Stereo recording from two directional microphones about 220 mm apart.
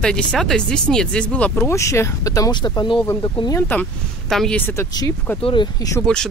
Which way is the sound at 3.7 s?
5° left (ahead or behind).